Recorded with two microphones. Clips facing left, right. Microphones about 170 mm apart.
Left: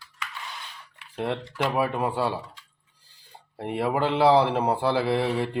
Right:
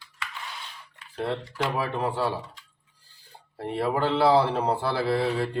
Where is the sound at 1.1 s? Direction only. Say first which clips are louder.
Left 1 dB; 15° left (ahead or behind).